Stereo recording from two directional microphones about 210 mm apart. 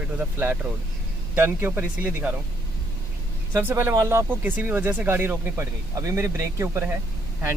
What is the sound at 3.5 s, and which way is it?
Speech, 10° right (ahead or behind).